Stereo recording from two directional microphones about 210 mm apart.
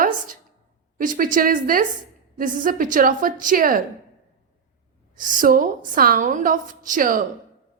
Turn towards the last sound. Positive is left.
turn(degrees=-40)  # may be behind; listen again after turning